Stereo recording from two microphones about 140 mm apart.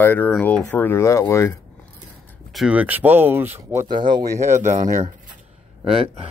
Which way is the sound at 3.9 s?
35° right (ahead or behind).